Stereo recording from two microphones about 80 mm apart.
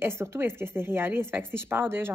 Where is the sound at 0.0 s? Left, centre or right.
Right.